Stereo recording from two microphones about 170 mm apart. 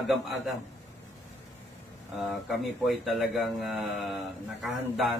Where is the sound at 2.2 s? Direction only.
Centre (ahead or behind).